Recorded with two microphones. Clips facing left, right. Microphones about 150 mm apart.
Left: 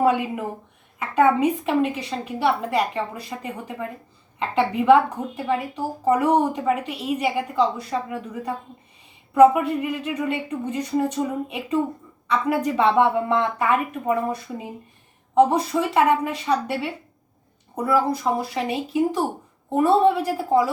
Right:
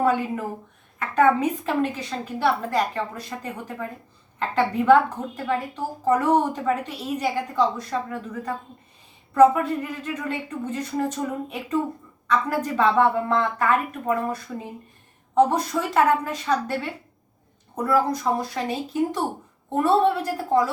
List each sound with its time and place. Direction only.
0.0 s a woman's voice: 15° left (ahead or behind)
12.7 s a woman's voice: 20° left (ahead or behind)